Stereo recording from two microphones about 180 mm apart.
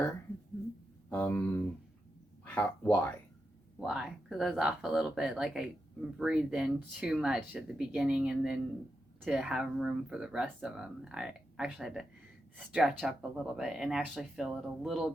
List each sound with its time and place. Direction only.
1.1 s speech: 10° left (ahead or behind)
3.8 s speech: centre (ahead or behind)